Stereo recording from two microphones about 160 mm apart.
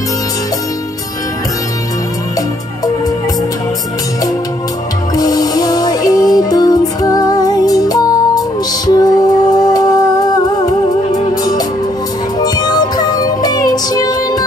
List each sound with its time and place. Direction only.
5.1 s music: 25° left (ahead or behind)